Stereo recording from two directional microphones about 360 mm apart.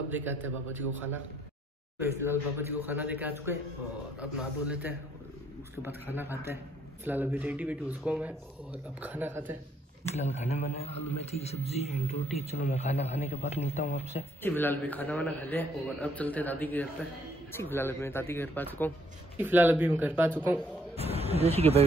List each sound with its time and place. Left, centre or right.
0.1 s a man's voice: centre
2.0 s a man's voice: centre
10.1 s a man's voice: centre
14.4 s a man's voice: centre
19.3 s speech: centre
20.9 s speech: centre